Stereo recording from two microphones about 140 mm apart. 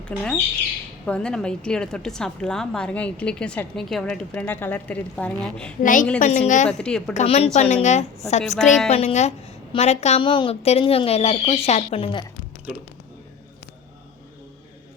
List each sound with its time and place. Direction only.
0.0 s a woman's voice: 5° left (ahead or behind)
5.8 s a woman's voice: 70° left (ahead or behind)
6.1 s a woman's voice: 55° left (ahead or behind)
6.7 s a woman's voice: 5° left (ahead or behind)
7.1 s a woman's voice: 55° left (ahead or behind)
10.2 s a woman's voice: 35° left (ahead or behind)